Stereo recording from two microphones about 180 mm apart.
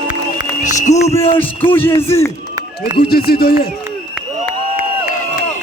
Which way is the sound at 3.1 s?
55° left (ahead or behind).